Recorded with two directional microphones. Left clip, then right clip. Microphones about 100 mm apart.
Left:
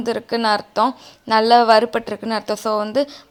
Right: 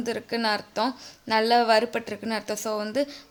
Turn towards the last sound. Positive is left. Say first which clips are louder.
# left 8 dB
turn(degrees=30)  # may be behind; listen again after turning